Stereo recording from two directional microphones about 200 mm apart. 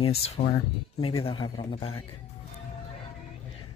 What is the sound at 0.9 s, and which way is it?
Speech, 25° left (ahead or behind).